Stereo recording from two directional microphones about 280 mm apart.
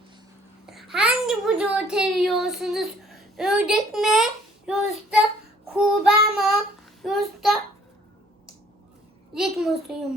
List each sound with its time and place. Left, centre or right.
0.7 s a child's voice: centre
5.7 s child singing: centre
7.0 s a child's voice: centre
9.3 s child singing: centre